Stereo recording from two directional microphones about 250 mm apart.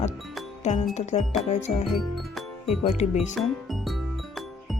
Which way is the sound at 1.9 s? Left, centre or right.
Centre.